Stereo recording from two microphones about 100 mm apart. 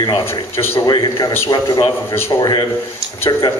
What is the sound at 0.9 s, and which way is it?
A man's voice, 40° left (ahead or behind).